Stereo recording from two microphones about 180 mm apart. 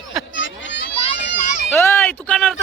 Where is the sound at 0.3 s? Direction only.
80° left.